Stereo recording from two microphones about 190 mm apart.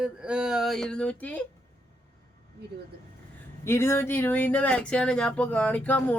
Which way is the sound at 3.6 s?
15° left (ahead or behind).